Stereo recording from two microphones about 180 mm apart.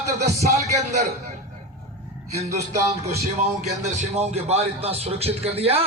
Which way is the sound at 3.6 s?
40° right (ahead or behind).